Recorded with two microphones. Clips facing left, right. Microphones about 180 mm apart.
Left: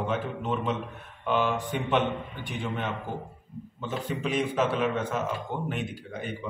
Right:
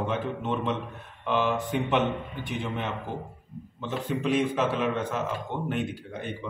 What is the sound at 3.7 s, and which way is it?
A man's voice, centre (ahead or behind).